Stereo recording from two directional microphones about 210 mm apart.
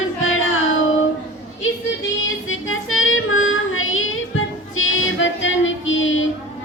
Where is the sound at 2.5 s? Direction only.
70° left (ahead or behind).